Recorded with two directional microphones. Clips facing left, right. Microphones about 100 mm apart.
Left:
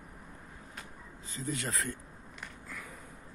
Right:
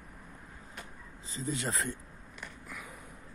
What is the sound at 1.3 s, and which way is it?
Speech, 25° right (ahead or behind).